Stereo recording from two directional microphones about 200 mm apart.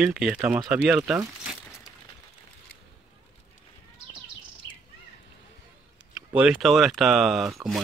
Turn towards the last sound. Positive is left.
turn(degrees=0)  # may be behind; listen again after turning